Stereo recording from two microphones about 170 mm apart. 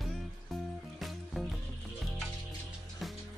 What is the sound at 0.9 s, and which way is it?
Music, centre (ahead or behind).